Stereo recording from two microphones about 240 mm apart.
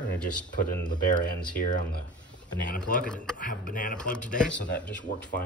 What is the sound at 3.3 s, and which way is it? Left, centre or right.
Speech, left.